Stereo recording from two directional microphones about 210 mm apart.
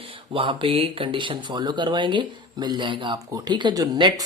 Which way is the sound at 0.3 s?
25° right (ahead or behind).